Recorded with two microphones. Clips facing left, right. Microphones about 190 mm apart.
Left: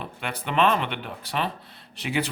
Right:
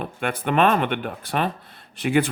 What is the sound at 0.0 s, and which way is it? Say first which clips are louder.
Speech: right 7 dB; 50° right (ahead or behind).